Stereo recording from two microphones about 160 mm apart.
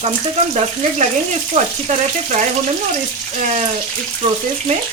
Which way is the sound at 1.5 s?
45° right (ahead or behind).